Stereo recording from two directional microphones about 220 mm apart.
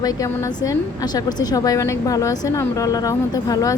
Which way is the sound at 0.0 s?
15° left (ahead or behind).